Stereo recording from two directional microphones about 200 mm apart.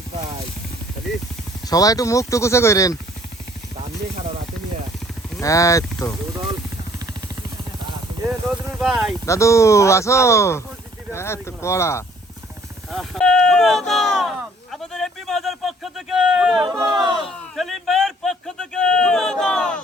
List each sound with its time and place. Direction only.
1.6 s speech: 20° left (ahead or behind)
5.4 s speech: 15° left (ahead or behind)
8.8 s speech: centre (ahead or behind)
9.2 s speech: 15° left (ahead or behind)
12.9 s a sound: centre (ahead or behind)
16.6 s speech: 20° right (ahead or behind)
17.5 s a sound: centre (ahead or behind)